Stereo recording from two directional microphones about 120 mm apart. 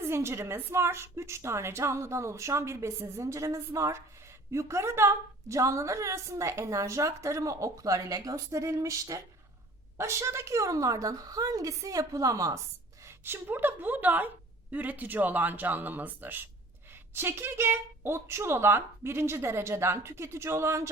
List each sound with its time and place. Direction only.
0.0 s a woman's voice: 20° right (ahead or behind)